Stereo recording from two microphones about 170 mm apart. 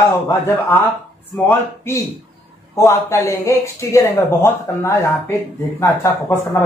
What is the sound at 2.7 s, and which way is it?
Speech, 15° left (ahead or behind).